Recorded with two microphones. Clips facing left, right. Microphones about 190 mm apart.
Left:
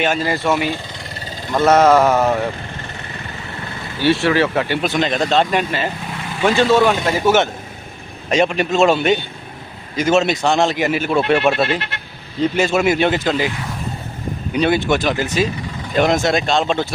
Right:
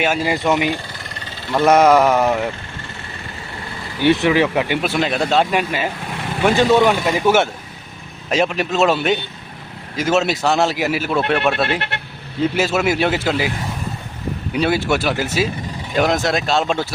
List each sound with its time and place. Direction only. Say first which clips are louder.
0.0 s speech: even; 10° right (ahead or behind)
4.0 s speech: right 1 dB; 20° right (ahead or behind); by 11.7 s centre (ahead or behind)
11.7 s speech: left 1 dB; 60° right (ahead or behind)
12.4 s speech: left 2 dB; 5° right (ahead or behind)
14.5 s speech: left 2 dB; 5° right (ahead or behind)